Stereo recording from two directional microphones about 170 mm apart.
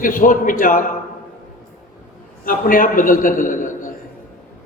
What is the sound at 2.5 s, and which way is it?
A man's voice, 55° left (ahead or behind).